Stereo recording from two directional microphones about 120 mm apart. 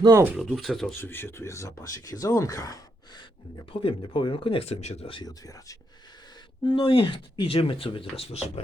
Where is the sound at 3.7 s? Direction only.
50° left (ahead or behind).